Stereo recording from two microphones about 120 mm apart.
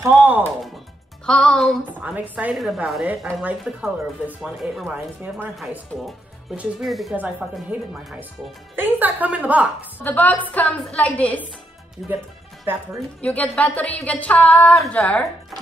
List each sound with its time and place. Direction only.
0.0 s a woman's voice: 15° right (ahead or behind)
1.2 s speech: 5° left (ahead or behind)
2.0 s a woman's voice: 15° right (ahead or behind)
2.5 s a woman's voice: centre (ahead or behind)
4.8 s a woman's voice: 15° right (ahead or behind)
6.5 s speech: 5° right (ahead or behind)
7.2 s a woman's voice: 10° right (ahead or behind)
9.9 s speech: 15° left (ahead or behind)
13.2 s speech: 10° left (ahead or behind)